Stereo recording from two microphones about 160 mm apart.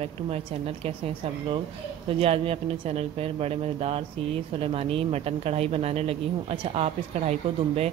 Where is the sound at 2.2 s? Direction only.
35° right (ahead or behind).